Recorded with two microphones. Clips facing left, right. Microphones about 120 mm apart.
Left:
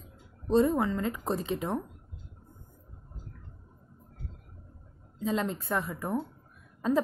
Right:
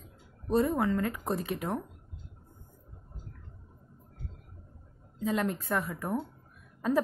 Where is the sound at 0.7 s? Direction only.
15° left (ahead or behind).